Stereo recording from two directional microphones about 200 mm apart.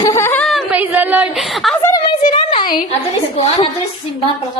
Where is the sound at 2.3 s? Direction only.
25° left (ahead or behind).